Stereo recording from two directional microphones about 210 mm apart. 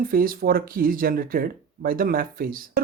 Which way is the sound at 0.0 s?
45° right (ahead or behind).